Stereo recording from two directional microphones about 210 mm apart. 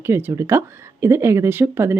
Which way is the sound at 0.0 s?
10° right (ahead or behind).